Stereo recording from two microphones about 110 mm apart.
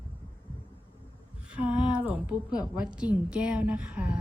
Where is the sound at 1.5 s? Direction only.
10° right (ahead or behind).